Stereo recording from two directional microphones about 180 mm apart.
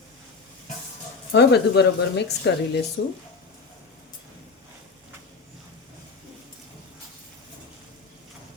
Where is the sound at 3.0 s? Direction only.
80° left.